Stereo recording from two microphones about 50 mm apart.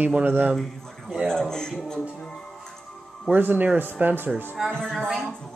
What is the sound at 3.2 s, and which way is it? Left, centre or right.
Speech, right.